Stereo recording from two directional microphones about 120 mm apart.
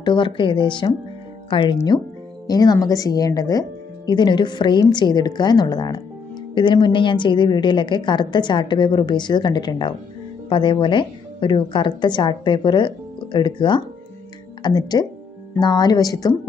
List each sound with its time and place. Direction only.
0.0 s speech: 40° left (ahead or behind)